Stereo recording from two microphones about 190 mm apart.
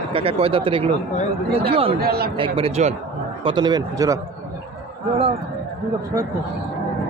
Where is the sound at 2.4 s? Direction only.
30° right (ahead or behind).